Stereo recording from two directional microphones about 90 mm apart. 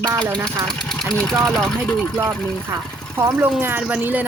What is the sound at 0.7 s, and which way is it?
Sewing machine, 5° left (ahead or behind).